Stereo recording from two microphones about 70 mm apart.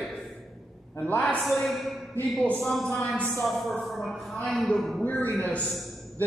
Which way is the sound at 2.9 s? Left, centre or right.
Left.